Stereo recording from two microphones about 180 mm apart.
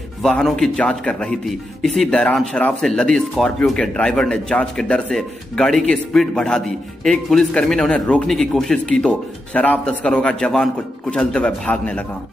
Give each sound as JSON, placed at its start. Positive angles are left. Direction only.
{"t": 0.2, "sound": "a man's voice", "side_deg": 5}